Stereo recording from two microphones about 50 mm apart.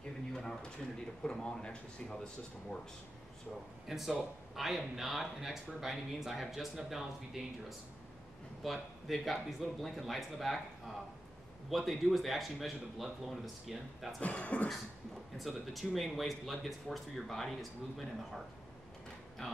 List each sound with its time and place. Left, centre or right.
0.3 s a sound: centre
1.2 s a man's voice: centre
3.8 s speech: centre
8.6 s speech: centre
11.7 s speech: centre
14.2 s speech: left
15.3 s speech: centre
19.4 s a man's voice: centre